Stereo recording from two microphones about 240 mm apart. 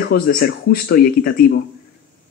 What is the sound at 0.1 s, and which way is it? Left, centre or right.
Speech, left.